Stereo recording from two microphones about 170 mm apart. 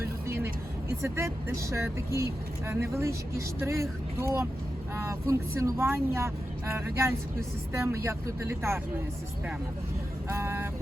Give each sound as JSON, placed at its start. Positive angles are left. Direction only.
{"t": 0.3, "sound": "speech", "side_deg": -15}
{"t": 10.2, "sound": "vehicle", "side_deg": -15}